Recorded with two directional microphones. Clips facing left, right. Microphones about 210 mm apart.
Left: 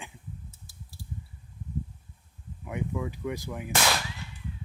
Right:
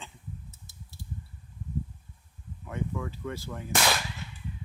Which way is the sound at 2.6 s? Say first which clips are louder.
Left 2 dB; 15° left (ahead or behind).